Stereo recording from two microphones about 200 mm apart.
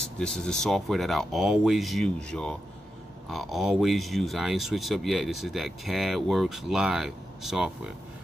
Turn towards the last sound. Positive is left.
turn(degrees=0)  # may be behind; listen again after turning